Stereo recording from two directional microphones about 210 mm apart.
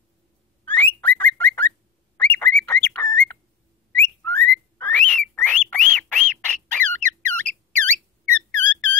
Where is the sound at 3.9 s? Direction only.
10° left (ahead or behind).